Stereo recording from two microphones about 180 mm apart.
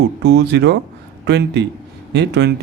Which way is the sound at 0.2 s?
70° right (ahead or behind).